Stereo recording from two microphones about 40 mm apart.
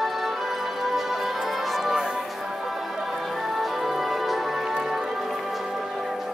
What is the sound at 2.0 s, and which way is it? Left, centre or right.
Music, centre.